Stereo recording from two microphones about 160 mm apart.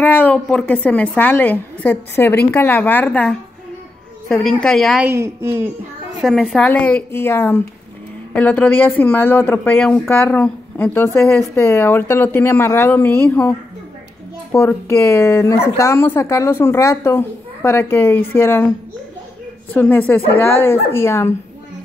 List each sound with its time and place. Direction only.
0.0 s a woman's voice: 10° left (ahead or behind)
5.0 s a woman's voice: 15° right (ahead or behind)
6.2 s speech: 5° left (ahead or behind)
19.7 s speech: 10° left (ahead or behind)